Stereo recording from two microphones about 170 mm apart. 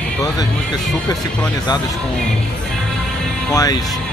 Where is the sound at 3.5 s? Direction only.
20° left (ahead or behind).